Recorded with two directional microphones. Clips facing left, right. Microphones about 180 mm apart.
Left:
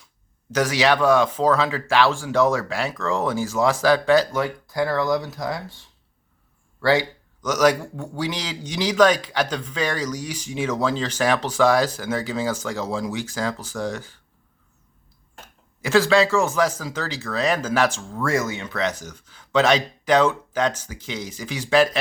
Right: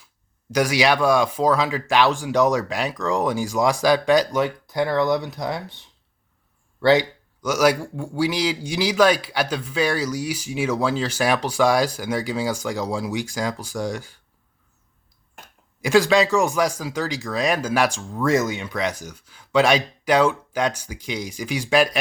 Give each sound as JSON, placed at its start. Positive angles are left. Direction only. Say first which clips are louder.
{"t": 0.5, "sound": "speech", "louder": "even", "side_deg": -10}
{"t": 7.4, "sound": "speech", "louder": "even", "side_deg": -10}
{"t": 15.8, "sound": "speech", "louder": "right 1 dB", "side_deg": -15}